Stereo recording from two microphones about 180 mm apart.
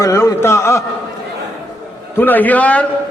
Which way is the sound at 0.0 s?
15° left (ahead or behind).